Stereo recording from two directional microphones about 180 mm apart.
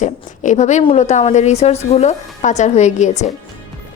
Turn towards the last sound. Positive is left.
turn(degrees=40)  # may be behind; listen again after turning